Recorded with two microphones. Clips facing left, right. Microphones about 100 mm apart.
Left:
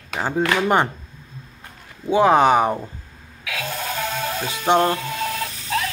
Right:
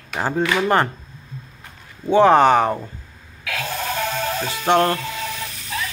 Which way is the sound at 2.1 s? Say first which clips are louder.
Right 2 dB; 5° left (ahead or behind).